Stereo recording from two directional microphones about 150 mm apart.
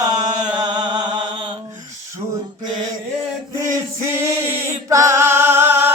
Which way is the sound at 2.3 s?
30° right (ahead or behind).